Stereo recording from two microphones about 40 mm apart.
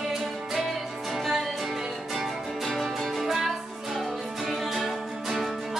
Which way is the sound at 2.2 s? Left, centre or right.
Centre.